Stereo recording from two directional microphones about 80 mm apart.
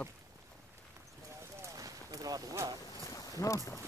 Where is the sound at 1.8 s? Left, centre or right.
Right.